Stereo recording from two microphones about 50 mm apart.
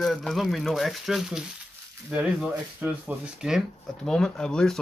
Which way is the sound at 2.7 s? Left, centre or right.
Right.